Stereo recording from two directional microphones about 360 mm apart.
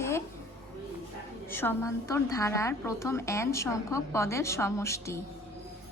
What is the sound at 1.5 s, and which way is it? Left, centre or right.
A woman's voice, centre.